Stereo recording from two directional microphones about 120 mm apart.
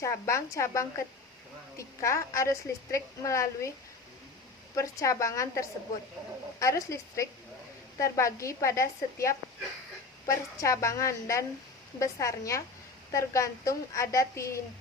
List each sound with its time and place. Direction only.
0.0 s a woman's voice: 25° left (ahead or behind)
4.7 s a woman's voice: 25° left (ahead or behind)